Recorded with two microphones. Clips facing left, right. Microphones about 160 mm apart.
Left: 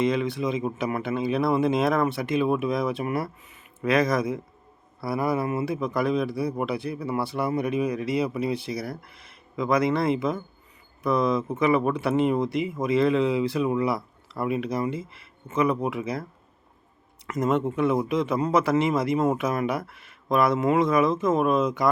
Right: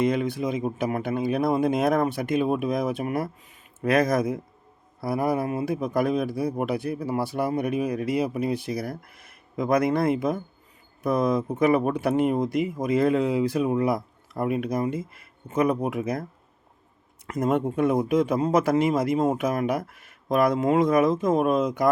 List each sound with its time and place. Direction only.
0.0 s speech: 50° right (ahead or behind)
17.3 s speech: 50° right (ahead or behind)